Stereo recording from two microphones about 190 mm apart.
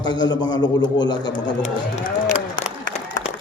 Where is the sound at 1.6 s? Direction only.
35° left (ahead or behind).